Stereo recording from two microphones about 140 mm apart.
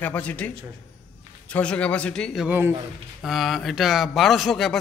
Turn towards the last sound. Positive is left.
turn(degrees=0)  # may be behind; listen again after turning